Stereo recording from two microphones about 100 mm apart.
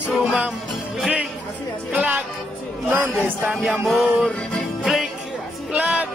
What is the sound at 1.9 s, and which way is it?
Music, 15° right (ahead or behind).